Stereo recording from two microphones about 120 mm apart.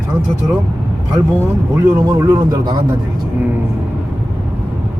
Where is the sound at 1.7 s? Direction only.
25° right (ahead or behind).